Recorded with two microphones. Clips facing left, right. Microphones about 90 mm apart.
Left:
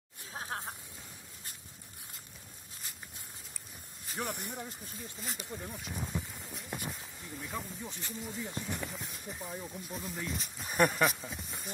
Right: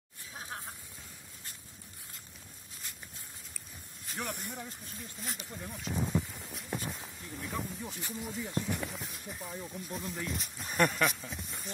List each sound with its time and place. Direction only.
0.3 s music: 40° left (ahead or behind)
4.3 s speech: 15° left (ahead or behind)
4.9 s speech: centre (ahead or behind)
5.9 s a sound: 5° right (ahead or behind)
7.4 s speech: centre (ahead or behind)